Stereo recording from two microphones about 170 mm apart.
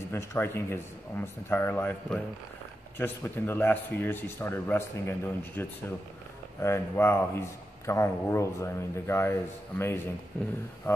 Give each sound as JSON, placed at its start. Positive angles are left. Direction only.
{"t": 0.1, "sound": "a man's voice", "side_deg": 15}